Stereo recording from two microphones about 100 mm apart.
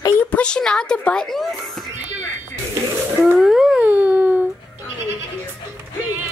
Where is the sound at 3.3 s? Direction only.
5° right (ahead or behind).